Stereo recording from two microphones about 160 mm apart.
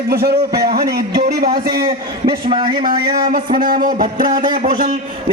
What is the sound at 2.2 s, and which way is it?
Speech, 30° right (ahead or behind).